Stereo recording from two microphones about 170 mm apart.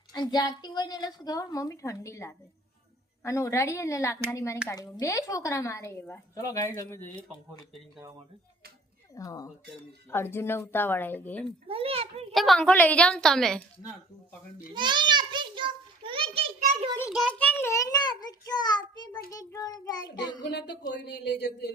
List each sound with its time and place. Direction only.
0.1 s a woman's voice: 25° left (ahead or behind)
9.1 s a woman's voice: 20° left (ahead or behind)
11.7 s a child's voice: 35° right (ahead or behind)
12.3 s a woman's voice: centre (ahead or behind)
14.7 s a sound: 25° right (ahead or behind)
17.2 s a woman's voice: 5° left (ahead or behind); by 20.4 s 25° left (ahead or behind)
20.9 s speech: 80° left